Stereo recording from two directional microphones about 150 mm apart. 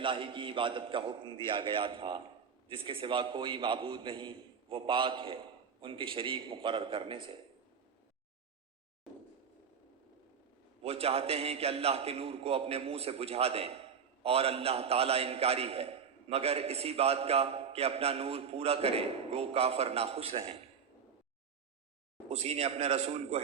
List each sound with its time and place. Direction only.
0.0 s a man's voice: 35° right (ahead or behind)
10.8 s a man's voice: 40° right (ahead or behind)
22.3 s a man's voice: 45° right (ahead or behind)